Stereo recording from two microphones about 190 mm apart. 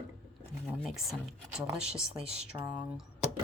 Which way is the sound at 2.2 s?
30° right (ahead or behind).